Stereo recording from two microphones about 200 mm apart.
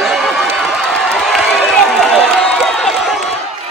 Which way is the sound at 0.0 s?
Centre (ahead or behind).